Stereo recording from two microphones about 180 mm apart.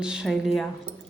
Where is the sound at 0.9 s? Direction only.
30° right (ahead or behind).